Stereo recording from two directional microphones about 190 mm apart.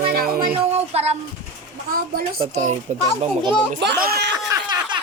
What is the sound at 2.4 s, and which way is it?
Speech, 35° right (ahead or behind).